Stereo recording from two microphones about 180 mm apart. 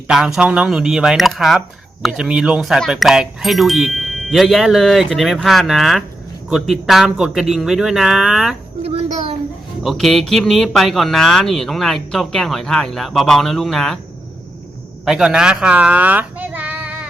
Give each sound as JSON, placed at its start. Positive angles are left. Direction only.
{"t": 0.1, "sound": "speech", "side_deg": -5}
{"t": 8.8, "sound": "a sound", "side_deg": -30}
{"t": 9.8, "sound": "speech", "side_deg": 0}
{"t": 15.0, "sound": "a child's voice", "side_deg": -5}